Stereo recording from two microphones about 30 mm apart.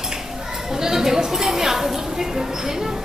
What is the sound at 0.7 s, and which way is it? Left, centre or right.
Speech, centre.